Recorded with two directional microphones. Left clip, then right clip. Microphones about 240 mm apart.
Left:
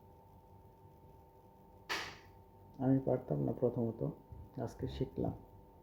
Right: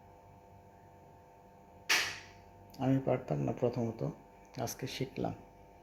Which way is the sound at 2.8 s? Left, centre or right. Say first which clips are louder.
Right 2 dB; centre.